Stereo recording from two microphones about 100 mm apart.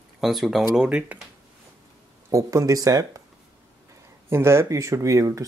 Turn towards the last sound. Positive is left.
turn(degrees=-35)  # may be behind; listen again after turning